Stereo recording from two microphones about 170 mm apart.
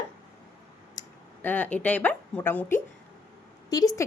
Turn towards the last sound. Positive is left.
turn(degrees=20)  # may be behind; listen again after turning